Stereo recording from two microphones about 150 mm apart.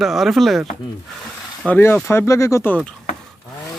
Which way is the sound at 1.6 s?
10° left (ahead or behind).